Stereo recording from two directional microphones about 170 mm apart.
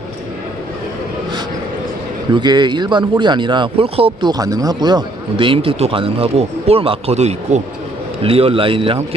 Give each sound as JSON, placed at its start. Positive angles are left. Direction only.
{"t": 2.3, "sound": "speech", "side_deg": -25}